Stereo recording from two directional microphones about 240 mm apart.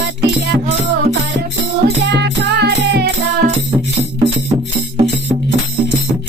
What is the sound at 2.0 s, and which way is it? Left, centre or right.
Music, right.